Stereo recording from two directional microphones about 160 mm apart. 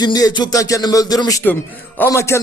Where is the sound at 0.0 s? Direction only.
25° left (ahead or behind).